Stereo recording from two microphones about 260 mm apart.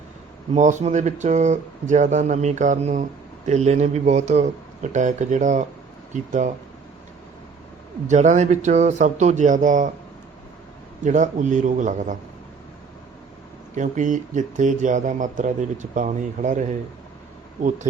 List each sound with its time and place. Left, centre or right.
0.5 s speech: right
8.0 s speech: right
11.0 s speech: right
13.7 s speech: right